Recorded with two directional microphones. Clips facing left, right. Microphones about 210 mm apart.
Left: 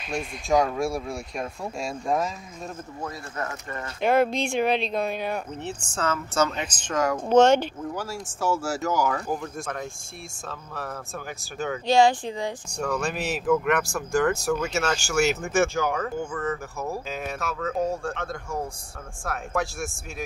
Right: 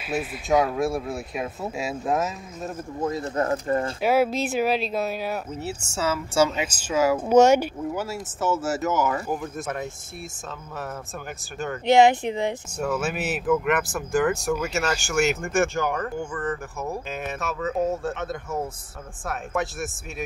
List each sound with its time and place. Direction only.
0.0 s speech: 5° right (ahead or behind)
3.0 s speech: 20° right (ahead or behind)
4.0 s speech: 5° right (ahead or behind)
11.8 s speech: 20° right (ahead or behind)
12.7 s speech: 5° right (ahead or behind)